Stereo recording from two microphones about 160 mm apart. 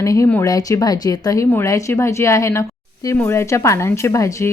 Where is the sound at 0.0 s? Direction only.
20° left (ahead or behind).